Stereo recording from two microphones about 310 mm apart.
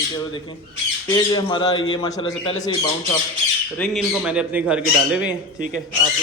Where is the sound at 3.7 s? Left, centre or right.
Centre.